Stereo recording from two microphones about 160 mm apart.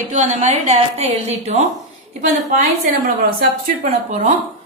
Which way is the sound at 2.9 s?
65° right (ahead or behind).